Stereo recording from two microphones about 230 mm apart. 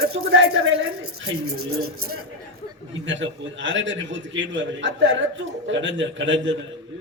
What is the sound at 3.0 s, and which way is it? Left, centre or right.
A man's voice, right.